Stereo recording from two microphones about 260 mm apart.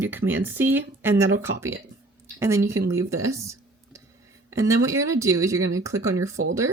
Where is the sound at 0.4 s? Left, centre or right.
Centre.